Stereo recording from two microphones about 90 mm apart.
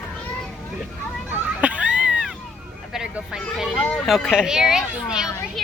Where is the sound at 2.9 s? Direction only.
10° right (ahead or behind).